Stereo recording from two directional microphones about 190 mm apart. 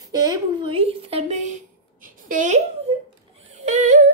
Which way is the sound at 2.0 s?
45° right (ahead or behind).